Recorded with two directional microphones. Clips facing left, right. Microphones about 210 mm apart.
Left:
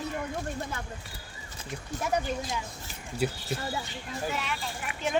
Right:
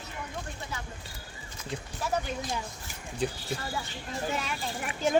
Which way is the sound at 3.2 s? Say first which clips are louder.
Left 1 dB; 5° left (ahead or behind).